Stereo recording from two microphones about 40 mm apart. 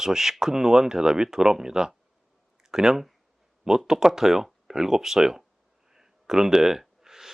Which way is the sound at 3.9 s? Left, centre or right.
Centre.